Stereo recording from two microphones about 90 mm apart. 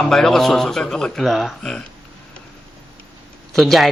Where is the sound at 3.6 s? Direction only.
Centre (ahead or behind).